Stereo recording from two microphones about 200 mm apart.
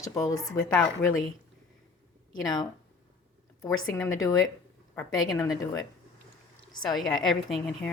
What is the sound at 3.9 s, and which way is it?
Speech, 15° left (ahead or behind).